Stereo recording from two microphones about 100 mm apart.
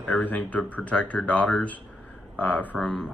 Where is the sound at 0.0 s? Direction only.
15° left (ahead or behind).